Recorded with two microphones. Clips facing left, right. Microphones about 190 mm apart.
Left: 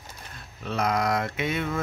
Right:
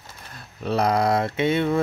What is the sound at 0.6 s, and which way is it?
Speech, 35° right (ahead or behind).